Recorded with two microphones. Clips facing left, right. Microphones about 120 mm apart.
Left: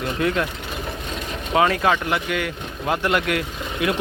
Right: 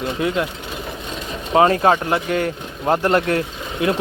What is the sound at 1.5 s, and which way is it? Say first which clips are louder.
Speech: right 4 dB; 35° right (ahead or behind).